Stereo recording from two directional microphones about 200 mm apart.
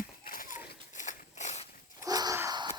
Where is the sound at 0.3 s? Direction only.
45° left (ahead or behind).